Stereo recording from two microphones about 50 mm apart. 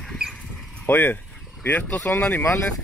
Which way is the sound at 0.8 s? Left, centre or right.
Left.